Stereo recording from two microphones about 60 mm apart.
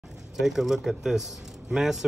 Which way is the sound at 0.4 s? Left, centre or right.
Centre.